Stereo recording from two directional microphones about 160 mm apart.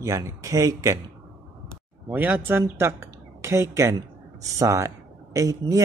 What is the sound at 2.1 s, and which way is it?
Speech, 10° right (ahead or behind).